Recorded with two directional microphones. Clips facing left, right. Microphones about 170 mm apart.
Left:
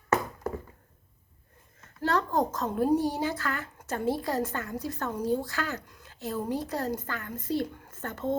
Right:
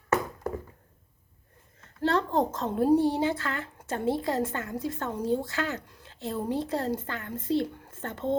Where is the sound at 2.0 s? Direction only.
25° right (ahead or behind).